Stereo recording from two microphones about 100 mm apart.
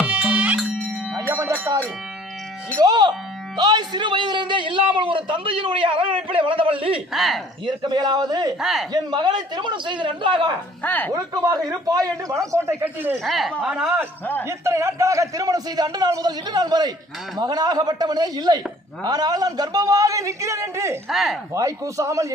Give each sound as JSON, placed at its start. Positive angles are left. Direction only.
{"t": 0.0, "sound": "music", "side_deg": -15}
{"t": 1.3, "sound": "music", "side_deg": -30}
{"t": 2.7, "sound": "a man's voice", "side_deg": -45}
{"t": 7.1, "sound": "speech", "side_deg": 0}
{"t": 7.6, "sound": "a man's voice", "side_deg": -50}
{"t": 8.6, "sound": "speech", "side_deg": -5}
{"t": 8.9, "sound": "a man's voice", "side_deg": -45}
{"t": 10.8, "sound": "speech", "side_deg": 20}
{"t": 11.1, "sound": "a man's voice", "side_deg": -40}
{"t": 13.2, "sound": "speech", "side_deg": 0}
{"t": 14.4, "sound": "a man's voice", "side_deg": -30}
{"t": 21.1, "sound": "speech", "side_deg": 0}
{"t": 21.5, "sound": "a man's voice", "side_deg": -30}